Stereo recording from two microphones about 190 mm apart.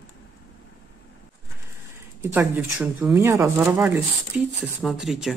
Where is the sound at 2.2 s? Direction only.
10° right (ahead or behind).